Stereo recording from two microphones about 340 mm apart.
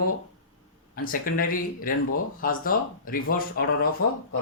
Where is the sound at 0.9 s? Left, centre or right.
Left.